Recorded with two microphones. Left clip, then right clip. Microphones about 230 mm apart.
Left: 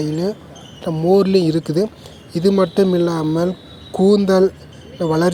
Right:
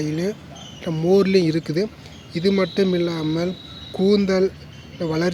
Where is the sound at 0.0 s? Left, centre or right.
Centre.